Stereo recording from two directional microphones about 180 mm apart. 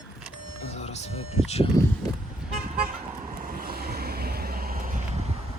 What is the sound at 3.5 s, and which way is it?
Vehicle, 55° right (ahead or behind).